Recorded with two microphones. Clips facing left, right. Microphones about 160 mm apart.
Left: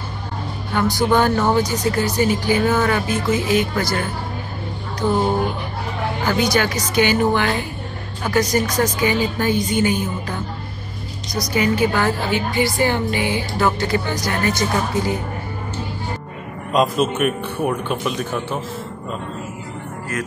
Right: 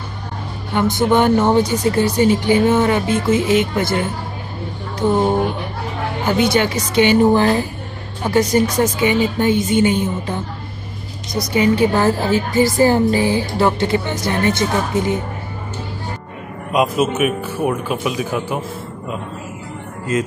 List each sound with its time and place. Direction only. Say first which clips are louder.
0.7 s a woman's voice: right 2 dB; 20° right (ahead or behind)
6.2 s a woman's voice: right 3 dB; 25° right (ahead or behind)
11.5 s a woman's voice: right 4 dB; 30° right (ahead or behind)
16.7 s speech: right 1 dB; 5° right (ahead or behind)
20.1 s a woman's voice: right 7 dB; 20° right (ahead or behind)